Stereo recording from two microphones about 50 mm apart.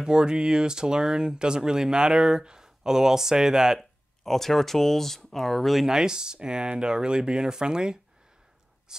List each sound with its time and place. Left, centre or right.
0.0 s speech: centre
4.2 s speech: centre
5.9 s speech: centre